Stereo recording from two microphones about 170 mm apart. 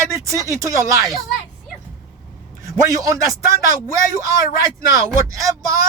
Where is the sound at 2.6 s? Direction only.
20° right (ahead or behind).